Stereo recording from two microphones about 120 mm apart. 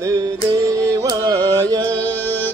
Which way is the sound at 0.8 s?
30° right (ahead or behind).